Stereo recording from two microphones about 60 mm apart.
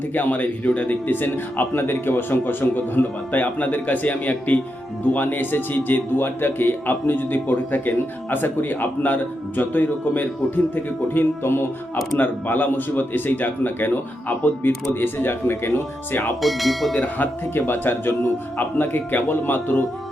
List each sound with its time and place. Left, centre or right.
0.1 s a man's voice: left
16.4 s speech: centre
17.0 s a man's voice: left